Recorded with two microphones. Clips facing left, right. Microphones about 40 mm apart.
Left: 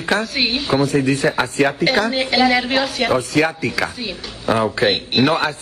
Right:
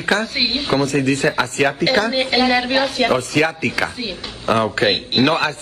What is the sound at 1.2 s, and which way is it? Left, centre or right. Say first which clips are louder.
Speech: even; centre.